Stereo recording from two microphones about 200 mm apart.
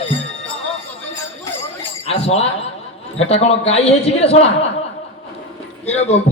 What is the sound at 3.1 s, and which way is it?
A man's voice, 30° left (ahead or behind).